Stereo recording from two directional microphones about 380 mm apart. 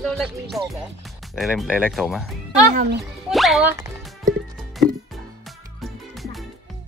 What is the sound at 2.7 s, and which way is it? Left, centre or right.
Speech, right.